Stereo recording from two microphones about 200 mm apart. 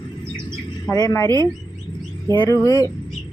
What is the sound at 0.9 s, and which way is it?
Speech, 20° left (ahead or behind).